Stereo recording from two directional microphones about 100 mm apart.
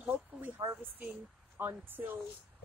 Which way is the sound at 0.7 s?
20° right (ahead or behind).